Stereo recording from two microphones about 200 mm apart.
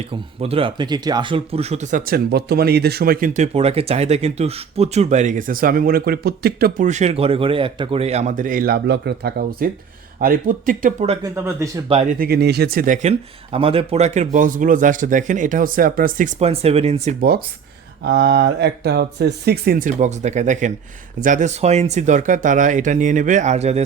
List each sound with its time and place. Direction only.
0.1 s speech: 30° right (ahead or behind)
11.3 s speech: 15° right (ahead or behind)
11.9 s speech: 35° right (ahead or behind)
12.2 s speech: 55° right (ahead or behind); by 17.2 s 30° right (ahead or behind)
17.2 s speech: 50° right (ahead or behind); by 23.8 s 35° right (ahead or behind)